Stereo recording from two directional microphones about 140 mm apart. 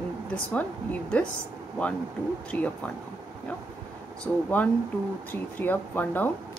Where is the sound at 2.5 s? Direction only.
10° left (ahead or behind).